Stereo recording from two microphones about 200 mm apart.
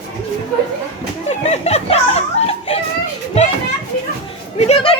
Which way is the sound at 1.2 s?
35° left (ahead or behind).